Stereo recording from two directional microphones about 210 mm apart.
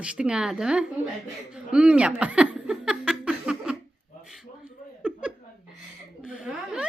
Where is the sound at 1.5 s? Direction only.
5° right (ahead or behind).